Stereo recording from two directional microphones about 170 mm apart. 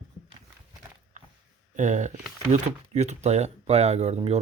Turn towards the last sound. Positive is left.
turn(degrees=-40)  # may be behind; listen again after turning